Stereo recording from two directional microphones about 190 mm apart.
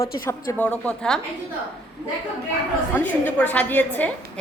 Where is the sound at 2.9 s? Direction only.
10° left (ahead or behind).